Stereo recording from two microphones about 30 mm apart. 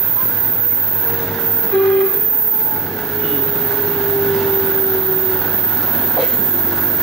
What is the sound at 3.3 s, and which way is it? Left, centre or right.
Vehicle, centre.